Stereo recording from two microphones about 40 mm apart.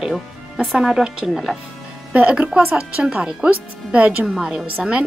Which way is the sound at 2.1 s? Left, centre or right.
Right.